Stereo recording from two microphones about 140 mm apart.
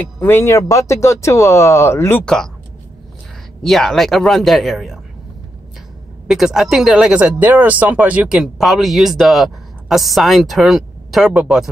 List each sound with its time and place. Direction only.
0.2 s speech: 15° left (ahead or behind)
2.2 s speech: 5° left (ahead or behind)
3.6 s speech: 5° left (ahead or behind)
6.2 s speech: 5° right (ahead or behind)